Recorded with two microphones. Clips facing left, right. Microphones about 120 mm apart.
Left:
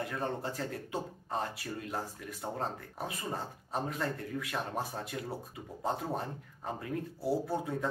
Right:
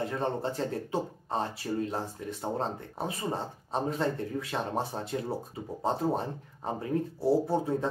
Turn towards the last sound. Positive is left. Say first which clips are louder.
# right 6 dB
turn(degrees=-30)  # may be behind; listen again after turning